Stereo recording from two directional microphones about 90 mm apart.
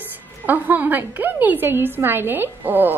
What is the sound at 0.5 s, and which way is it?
Speech, 20° right (ahead or behind).